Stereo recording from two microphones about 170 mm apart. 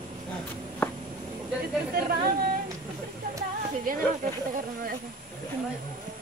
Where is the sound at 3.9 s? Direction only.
55° right (ahead or behind).